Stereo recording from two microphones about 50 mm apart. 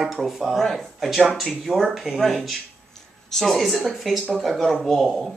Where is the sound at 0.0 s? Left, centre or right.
Centre.